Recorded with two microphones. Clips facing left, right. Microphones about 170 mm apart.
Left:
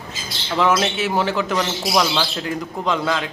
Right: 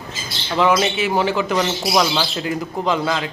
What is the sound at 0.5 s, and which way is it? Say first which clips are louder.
Speech: right 2 dB; centre (ahead or behind).